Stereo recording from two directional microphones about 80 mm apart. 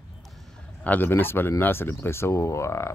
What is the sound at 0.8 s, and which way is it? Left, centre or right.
Speech, left.